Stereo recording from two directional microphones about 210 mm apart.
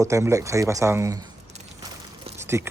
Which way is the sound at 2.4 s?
10° right (ahead or behind).